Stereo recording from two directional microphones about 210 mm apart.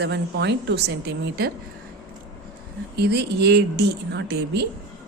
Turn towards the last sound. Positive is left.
turn(degrees=-50)  # may be behind; listen again after turning